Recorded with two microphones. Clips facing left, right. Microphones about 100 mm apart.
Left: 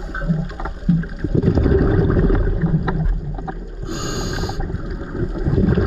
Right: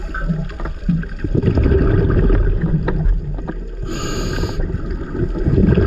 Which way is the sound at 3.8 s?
45° right (ahead or behind).